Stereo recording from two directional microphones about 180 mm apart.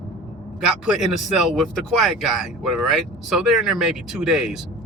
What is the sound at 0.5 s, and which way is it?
Speech, centre (ahead or behind).